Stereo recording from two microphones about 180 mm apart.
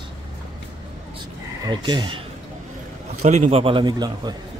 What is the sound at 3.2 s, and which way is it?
A man's voice, 40° right (ahead or behind).